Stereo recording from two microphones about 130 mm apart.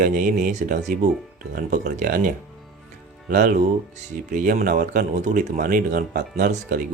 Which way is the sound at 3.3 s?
85° right.